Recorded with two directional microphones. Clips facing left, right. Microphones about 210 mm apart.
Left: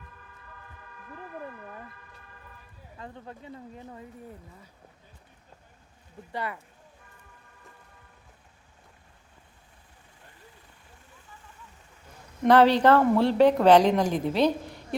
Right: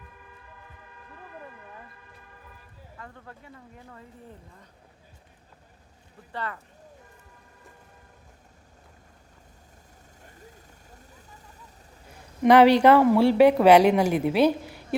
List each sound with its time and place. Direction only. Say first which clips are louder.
3.0 s speech: left 4 dB; 20° left (ahead or behind)
6.3 s speech: left 1 dB; 10° left (ahead or behind)
11.1 s vehicle: right 2 dB; 40° right (ahead or behind)
12.4 s speech: right 3 dB; 10° right (ahead or behind)